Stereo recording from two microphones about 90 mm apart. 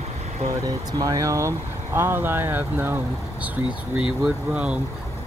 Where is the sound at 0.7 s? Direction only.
45° right (ahead or behind); by 4.0 s 15° right (ahead or behind).